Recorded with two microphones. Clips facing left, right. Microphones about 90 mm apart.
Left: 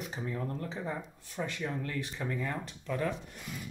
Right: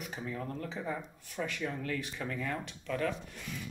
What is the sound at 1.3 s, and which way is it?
Speech, 20° left (ahead or behind).